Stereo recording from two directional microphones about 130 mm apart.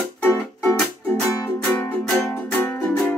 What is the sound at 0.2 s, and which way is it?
Music, 15° left (ahead or behind).